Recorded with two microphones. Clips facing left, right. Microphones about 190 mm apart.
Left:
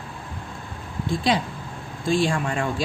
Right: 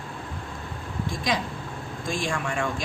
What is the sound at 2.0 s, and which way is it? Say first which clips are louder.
Speech: left 7 dB; 35° left (ahead or behind).